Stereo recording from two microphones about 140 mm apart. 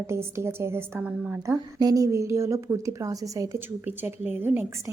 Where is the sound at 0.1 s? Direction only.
20° right (ahead or behind).